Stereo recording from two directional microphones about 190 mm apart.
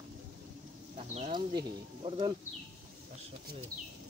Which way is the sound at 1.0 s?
35° right (ahead or behind).